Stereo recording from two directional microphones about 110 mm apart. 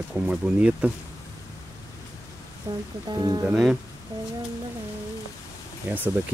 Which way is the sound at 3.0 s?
40° right (ahead or behind).